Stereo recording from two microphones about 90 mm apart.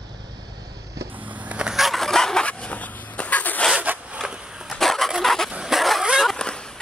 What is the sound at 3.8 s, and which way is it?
Zipper, 20° right (ahead or behind).